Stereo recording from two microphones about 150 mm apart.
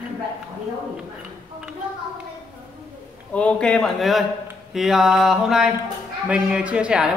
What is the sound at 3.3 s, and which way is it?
Speech, 10° left (ahead or behind).